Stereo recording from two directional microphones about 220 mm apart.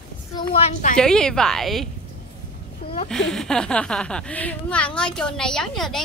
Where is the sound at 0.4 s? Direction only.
25° left (ahead or behind).